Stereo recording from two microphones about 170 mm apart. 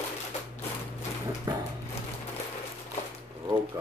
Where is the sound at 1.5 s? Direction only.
20° right (ahead or behind).